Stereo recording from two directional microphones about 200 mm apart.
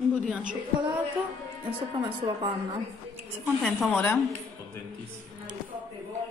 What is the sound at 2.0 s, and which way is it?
Speech, 25° right (ahead or behind).